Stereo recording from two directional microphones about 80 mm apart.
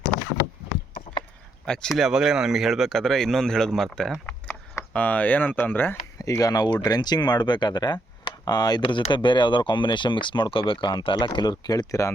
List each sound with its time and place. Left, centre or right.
1.6 s speech: centre
1.9 s speech: centre
4.9 s speech: centre
6.1 s speech: left